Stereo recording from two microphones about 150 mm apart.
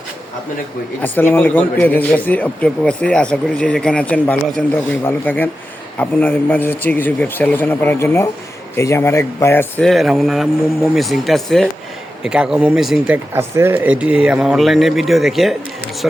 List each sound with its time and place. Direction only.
1.0 s a man's voice: 15° left (ahead or behind)
9.8 s speech: centre (ahead or behind)
13.3 s speech: 15° right (ahead or behind)